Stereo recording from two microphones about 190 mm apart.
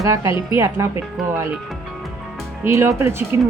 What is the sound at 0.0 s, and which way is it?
Speech, 15° right (ahead or behind).